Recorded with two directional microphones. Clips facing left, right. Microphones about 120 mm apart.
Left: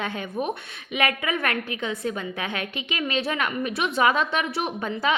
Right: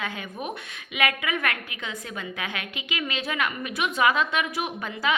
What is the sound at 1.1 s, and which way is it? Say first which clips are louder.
A woman's voice: left 2 dB; 30° left (ahead or behind).